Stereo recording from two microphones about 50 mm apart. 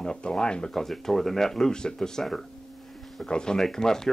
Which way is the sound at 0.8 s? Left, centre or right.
Centre.